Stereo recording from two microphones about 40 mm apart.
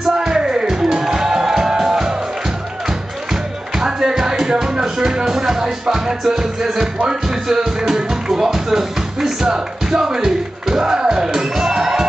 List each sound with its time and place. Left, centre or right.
0.0 s music: centre
3.7 s music: centre
7.1 s speech: centre